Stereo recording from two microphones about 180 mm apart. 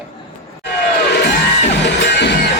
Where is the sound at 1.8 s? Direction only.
70° left (ahead or behind).